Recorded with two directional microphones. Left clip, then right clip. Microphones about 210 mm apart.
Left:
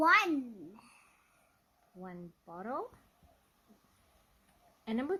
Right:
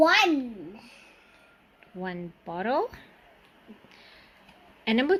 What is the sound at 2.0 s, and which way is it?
Speech, centre (ahead or behind).